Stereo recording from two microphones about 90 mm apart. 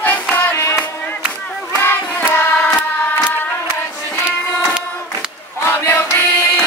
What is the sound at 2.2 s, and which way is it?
Carnatic music, 25° left (ahead or behind).